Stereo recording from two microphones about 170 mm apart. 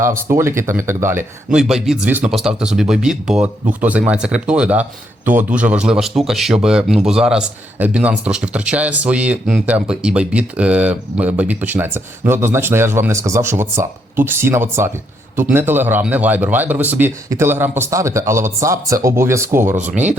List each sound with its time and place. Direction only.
0.0 s speech: 15° right (ahead or behind)
1.5 s speech: centre (ahead or behind)